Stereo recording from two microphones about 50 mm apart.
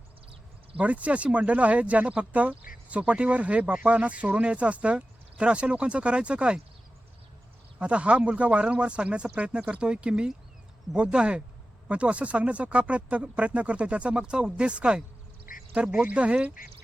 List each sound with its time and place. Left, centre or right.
0.8 s speech: right
7.8 s speech: right